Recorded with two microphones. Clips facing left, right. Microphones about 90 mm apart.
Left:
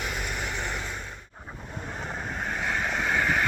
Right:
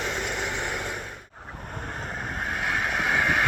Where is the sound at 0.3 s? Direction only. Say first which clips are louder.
Right 2 dB; 20° right (ahead or behind).